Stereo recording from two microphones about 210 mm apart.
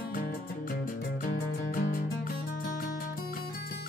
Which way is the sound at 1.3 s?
40° left (ahead or behind).